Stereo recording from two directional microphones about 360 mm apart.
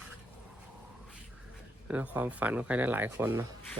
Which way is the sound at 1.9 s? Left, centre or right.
Centre.